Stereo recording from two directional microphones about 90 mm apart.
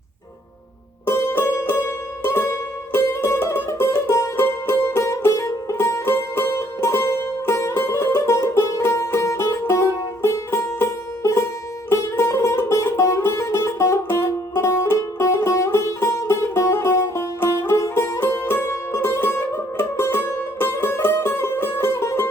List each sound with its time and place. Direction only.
1.0 s music: 30° left (ahead or behind)